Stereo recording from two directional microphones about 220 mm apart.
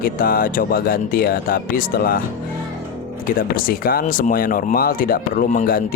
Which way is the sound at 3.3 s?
40° left (ahead or behind).